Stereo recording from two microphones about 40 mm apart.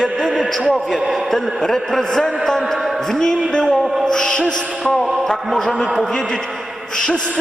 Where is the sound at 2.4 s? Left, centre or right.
Centre.